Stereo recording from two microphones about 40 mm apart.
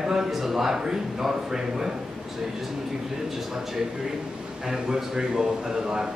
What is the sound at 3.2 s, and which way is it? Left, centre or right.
A man's voice, centre.